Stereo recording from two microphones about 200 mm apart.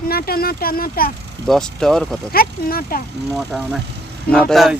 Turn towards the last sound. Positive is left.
turn(degrees=0)  # may be behind; listen again after turning